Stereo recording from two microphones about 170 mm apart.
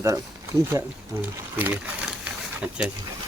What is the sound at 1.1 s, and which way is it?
Rub, 15° right (ahead or behind).